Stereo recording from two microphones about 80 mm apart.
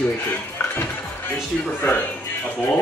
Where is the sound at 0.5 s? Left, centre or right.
Left.